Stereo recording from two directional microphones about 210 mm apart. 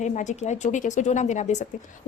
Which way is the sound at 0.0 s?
35° left (ahead or behind).